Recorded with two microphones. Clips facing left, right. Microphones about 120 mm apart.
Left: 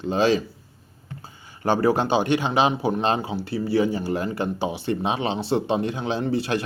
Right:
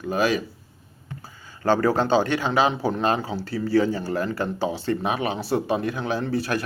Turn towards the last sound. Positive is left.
turn(degrees=20)  # may be behind; listen again after turning